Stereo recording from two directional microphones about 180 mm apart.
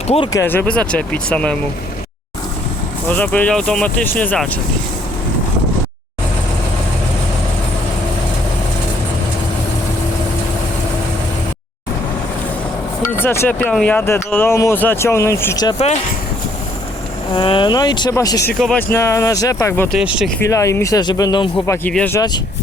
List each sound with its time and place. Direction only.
0.3 s speech: 10° left (ahead or behind)
3.1 s speech: 10° left (ahead or behind)
13.0 s speech: 15° left (ahead or behind)
17.3 s speech: 25° left (ahead or behind)
18.6 s speech: 10° left (ahead or behind)
20.0 s speech: 5° right (ahead or behind)
20.4 s speech: 15° left (ahead or behind)
21.8 s speech: 10° left (ahead or behind)